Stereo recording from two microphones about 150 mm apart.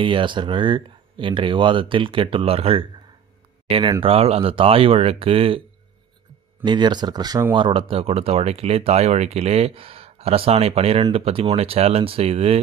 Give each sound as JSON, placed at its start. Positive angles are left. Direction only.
{"t": 0.0, "sound": "speech", "side_deg": -35}
{"t": 6.6, "sound": "speech", "side_deg": -30}